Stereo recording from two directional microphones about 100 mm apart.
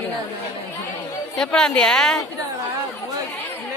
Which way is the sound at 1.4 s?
10° left (ahead or behind).